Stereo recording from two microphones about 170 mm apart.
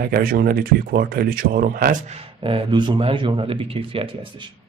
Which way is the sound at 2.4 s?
30° right (ahead or behind).